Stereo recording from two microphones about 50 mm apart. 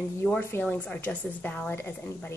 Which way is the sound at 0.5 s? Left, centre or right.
Left.